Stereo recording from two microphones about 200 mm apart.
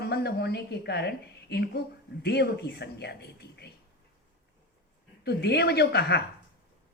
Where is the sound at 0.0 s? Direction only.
55° left (ahead or behind).